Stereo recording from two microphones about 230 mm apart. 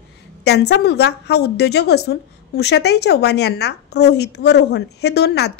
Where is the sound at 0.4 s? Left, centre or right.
Left.